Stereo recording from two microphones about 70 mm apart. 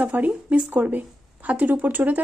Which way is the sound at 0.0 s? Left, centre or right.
Right.